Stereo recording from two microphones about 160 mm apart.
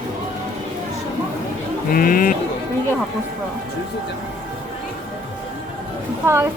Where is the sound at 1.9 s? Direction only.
60° left (ahead or behind).